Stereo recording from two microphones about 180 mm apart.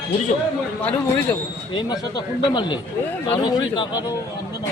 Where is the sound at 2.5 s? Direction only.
25° left (ahead or behind).